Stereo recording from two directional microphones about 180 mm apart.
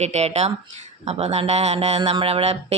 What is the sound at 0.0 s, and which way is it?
Speech, 40° right (ahead or behind).